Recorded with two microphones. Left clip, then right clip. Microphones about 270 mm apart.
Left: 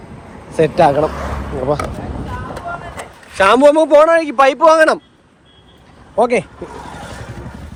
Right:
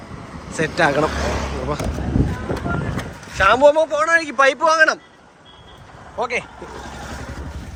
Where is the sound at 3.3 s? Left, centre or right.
Centre.